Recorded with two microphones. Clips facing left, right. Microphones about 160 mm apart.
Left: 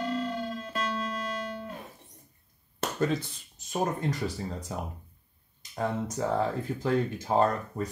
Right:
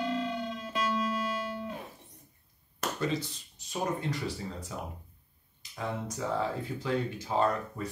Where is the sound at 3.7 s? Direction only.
45° left (ahead or behind).